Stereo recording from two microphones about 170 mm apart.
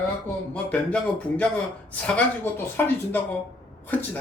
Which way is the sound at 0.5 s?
5° left (ahead or behind).